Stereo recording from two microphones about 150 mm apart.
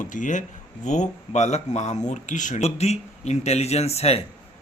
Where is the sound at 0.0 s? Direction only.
60° left (ahead or behind).